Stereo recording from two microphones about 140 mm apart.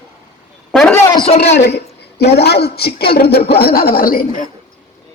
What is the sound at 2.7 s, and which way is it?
Speech, 90° left.